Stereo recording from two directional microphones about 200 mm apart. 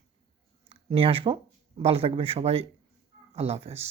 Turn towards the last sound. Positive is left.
turn(degrees=-30)  # may be behind; listen again after turning